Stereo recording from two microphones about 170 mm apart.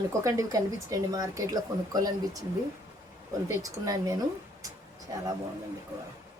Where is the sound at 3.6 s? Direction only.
20° right (ahead or behind).